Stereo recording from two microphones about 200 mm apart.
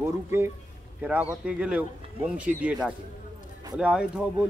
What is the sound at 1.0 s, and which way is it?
Speech, 5° right (ahead or behind).